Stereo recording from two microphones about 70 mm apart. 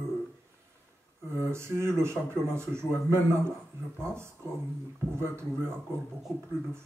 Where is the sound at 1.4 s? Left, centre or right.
Right.